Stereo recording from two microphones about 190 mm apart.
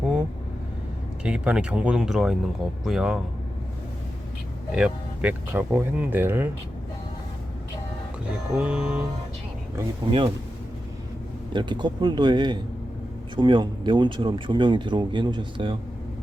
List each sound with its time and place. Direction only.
1.2 s speech: 5° right (ahead or behind)
4.7 s speech: 5° right (ahead or behind)
8.5 s speech: 5° right (ahead or behind)
10.1 s speech: 25° right (ahead or behind)
11.5 s speech: 25° right (ahead or behind)